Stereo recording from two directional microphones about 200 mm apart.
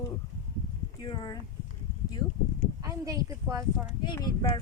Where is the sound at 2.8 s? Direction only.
15° right (ahead or behind).